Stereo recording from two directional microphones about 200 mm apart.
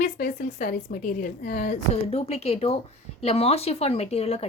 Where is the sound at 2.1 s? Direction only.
30° left (ahead or behind).